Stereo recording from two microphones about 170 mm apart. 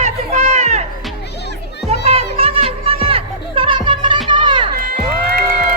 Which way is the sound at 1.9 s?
35° right (ahead or behind).